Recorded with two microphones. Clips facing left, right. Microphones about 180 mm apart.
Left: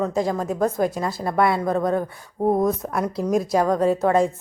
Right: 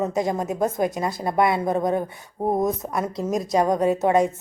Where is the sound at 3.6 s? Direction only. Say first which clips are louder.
Right 1 dB; 20° right (ahead or behind).